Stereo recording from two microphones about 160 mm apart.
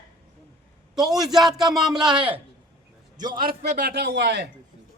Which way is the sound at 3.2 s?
55° right (ahead or behind).